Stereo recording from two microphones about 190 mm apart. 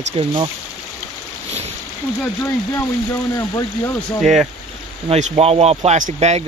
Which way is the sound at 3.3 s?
15° left (ahead or behind).